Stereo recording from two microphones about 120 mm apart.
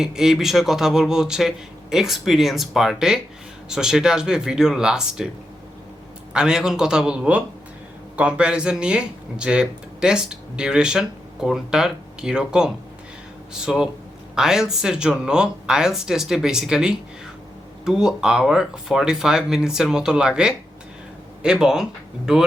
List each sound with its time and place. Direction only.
0.0 s speech: 5° right (ahead or behind)
6.3 s speech: 5° right (ahead or behind)